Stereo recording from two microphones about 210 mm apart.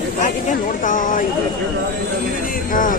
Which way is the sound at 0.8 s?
40° left (ahead or behind).